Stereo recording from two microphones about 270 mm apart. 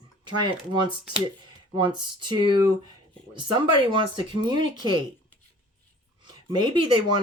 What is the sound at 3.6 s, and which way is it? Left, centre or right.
Speech, centre.